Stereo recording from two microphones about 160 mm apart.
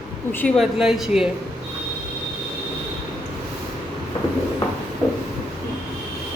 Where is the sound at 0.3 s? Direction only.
5° left (ahead or behind).